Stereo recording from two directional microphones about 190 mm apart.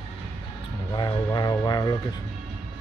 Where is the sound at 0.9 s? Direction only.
25° left (ahead or behind).